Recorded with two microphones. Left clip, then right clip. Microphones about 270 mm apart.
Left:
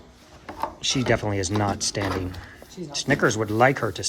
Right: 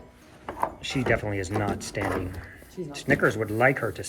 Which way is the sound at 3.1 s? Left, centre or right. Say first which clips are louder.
Left 1 dB; centre.